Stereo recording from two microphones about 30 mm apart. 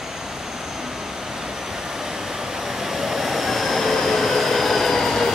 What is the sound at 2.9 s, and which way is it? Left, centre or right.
Train, centre.